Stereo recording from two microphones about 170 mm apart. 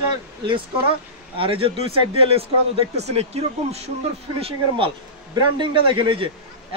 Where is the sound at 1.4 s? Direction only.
30° right (ahead or behind).